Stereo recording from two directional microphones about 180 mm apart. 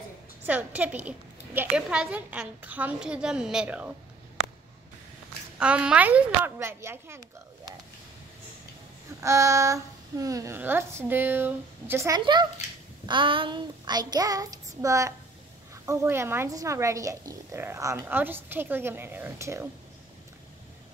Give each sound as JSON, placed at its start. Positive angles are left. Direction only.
{"t": 0.5, "sound": "speech", "side_deg": -10}
{"t": 5.6, "sound": "speech", "side_deg": -5}
{"t": 9.2, "sound": "speech", "side_deg": -15}
{"t": 13.1, "sound": "child singing", "side_deg": -30}
{"t": 14.8, "sound": "speech", "side_deg": -15}